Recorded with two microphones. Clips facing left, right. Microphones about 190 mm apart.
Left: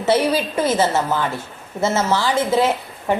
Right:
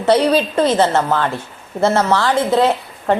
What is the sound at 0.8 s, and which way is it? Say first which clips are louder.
A woman's voice: right 3 dB; 70° right (ahead or behind).